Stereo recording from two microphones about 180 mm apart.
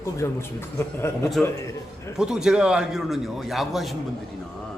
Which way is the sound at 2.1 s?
5° right (ahead or behind).